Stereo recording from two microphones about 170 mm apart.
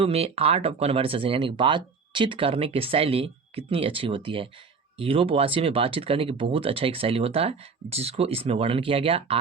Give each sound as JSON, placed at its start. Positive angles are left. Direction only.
{"t": 0.0, "sound": "speech", "side_deg": -35}